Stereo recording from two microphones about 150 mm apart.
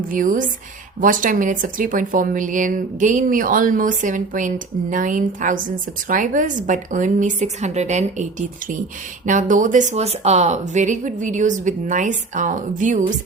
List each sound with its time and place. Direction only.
0.1 s speech: 65° right (ahead or behind)